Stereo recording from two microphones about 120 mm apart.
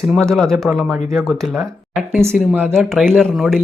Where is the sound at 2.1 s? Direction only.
20° right (ahead or behind).